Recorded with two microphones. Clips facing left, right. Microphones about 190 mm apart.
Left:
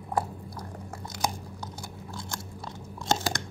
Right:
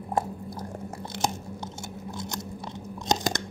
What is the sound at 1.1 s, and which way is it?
Chewing, 25° right (ahead or behind).